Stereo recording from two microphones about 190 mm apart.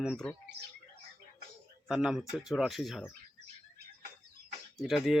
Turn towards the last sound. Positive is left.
turn(degrees=0)  # may be behind; listen again after turning